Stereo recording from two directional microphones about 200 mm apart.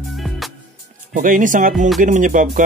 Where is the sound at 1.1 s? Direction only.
40° right (ahead or behind).